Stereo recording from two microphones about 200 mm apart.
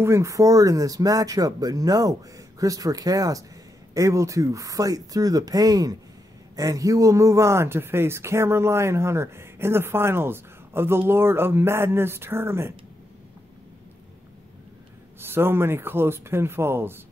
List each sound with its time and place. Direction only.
0.0 s speech: 15° right (ahead or behind)
15.1 s speech: 10° right (ahead or behind)